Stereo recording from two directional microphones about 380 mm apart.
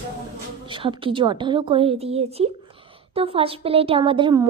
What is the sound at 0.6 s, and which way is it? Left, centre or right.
A woman's voice, centre.